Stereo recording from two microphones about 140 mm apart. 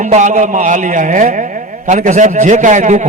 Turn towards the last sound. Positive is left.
turn(degrees=-60)  # may be behind; listen again after turning